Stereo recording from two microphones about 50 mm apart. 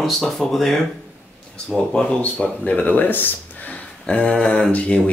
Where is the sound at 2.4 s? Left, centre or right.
Left.